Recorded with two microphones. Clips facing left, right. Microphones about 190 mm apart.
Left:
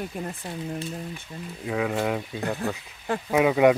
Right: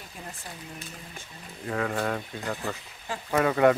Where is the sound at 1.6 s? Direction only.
5° left (ahead or behind).